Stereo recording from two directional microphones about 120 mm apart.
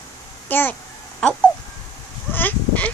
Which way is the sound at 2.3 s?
15° left (ahead or behind).